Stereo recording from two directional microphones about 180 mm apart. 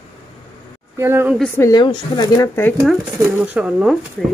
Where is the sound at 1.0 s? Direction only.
15° right (ahead or behind).